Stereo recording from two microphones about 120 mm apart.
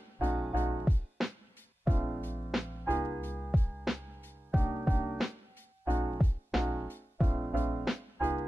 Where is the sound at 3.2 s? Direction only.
15° left (ahead or behind).